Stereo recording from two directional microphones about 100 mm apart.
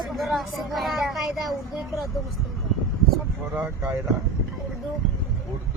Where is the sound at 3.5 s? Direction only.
15° right (ahead or behind).